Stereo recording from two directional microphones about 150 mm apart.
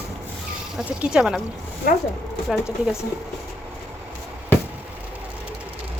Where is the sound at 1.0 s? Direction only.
5° right (ahead or behind).